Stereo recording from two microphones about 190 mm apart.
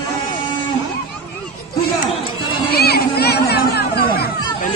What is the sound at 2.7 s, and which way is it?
Children playing, 55° left (ahead or behind).